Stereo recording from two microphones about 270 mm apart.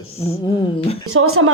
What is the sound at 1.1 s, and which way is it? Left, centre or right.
Speech, right.